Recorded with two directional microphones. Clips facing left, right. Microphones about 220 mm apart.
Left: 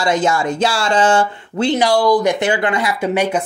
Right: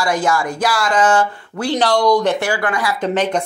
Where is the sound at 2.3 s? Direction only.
20° left (ahead or behind).